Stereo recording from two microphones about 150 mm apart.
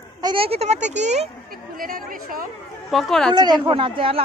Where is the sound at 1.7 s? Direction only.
70° right (ahead or behind).